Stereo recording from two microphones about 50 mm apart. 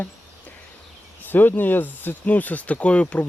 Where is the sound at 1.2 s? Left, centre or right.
Left.